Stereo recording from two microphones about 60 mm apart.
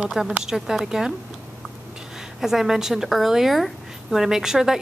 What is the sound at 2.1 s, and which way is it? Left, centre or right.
A woman's voice, centre.